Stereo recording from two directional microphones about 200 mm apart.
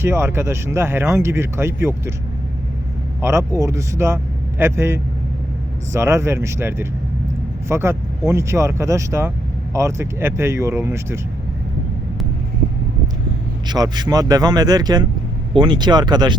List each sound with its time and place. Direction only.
0.0 s speech: 10° right (ahead or behind)
3.2 s speech: 15° right (ahead or behind)
13.7 s speech: 20° right (ahead or behind)